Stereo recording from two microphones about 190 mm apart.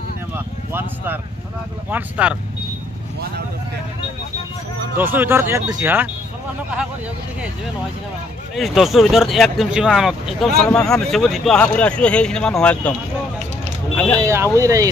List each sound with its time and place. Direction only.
0.3 s vehicle: 10° right (ahead or behind)
1.9 s speech: 10° right (ahead or behind)
4.9 s speech: 10° right (ahead or behind)
8.5 s speech: centre (ahead or behind)
13.9 s speech: 10° left (ahead or behind)
14.2 s speech: 15° right (ahead or behind)